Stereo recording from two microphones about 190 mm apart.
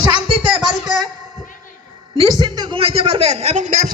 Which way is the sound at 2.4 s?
25° right (ahead or behind).